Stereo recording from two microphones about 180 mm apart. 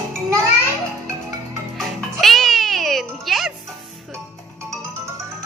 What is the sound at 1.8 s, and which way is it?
Music, centre (ahead or behind).